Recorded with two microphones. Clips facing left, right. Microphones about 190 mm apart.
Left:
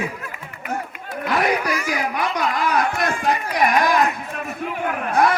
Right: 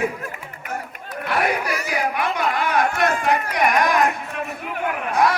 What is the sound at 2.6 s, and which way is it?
Speech, 35° left (ahead or behind).